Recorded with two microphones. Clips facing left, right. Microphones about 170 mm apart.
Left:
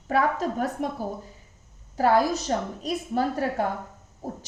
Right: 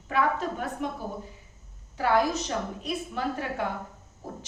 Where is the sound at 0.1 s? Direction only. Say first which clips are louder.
Left 3 dB; 40° left (ahead or behind).